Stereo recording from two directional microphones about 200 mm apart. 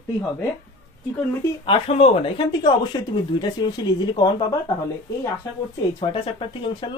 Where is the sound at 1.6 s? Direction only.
30° left (ahead or behind).